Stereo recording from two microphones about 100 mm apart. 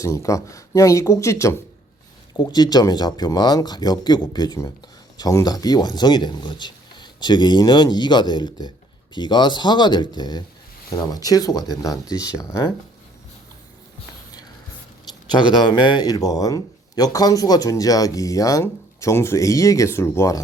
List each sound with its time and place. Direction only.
0.0 s speech: 30° left (ahead or behind)
2.3 s speech: 45° left (ahead or behind)
15.3 s speech: 50° left (ahead or behind); by 20.4 s 30° left (ahead or behind)